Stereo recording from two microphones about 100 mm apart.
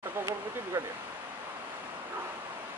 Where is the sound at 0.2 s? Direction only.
30° right (ahead or behind).